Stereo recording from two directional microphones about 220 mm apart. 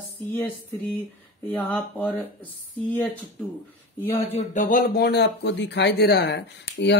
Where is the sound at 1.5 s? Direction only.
5° left (ahead or behind).